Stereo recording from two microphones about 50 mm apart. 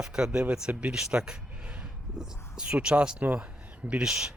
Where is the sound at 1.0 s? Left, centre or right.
Centre.